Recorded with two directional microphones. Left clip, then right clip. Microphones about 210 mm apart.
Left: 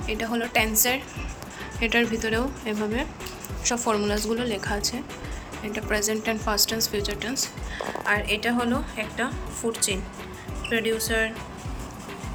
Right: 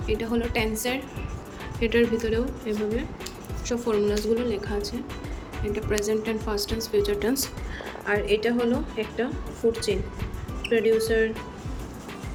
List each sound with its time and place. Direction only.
0.1 s a woman's voice: 5° right (ahead or behind)
10.6 s a woman's voice: 10° right (ahead or behind)